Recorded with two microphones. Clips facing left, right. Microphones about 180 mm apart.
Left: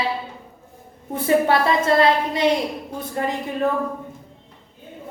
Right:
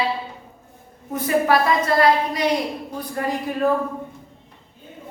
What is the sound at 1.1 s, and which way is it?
A woman's voice, 30° left (ahead or behind).